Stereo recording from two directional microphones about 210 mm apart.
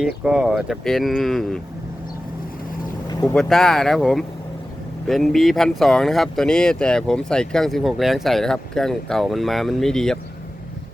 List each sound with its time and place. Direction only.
0.3 s speech: 5° right (ahead or behind)
3.1 s boat: 15° left (ahead or behind)
3.3 s speech: centre (ahead or behind)